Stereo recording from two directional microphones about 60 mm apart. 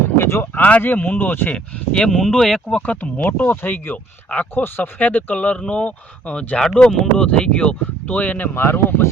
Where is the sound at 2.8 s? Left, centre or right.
Left.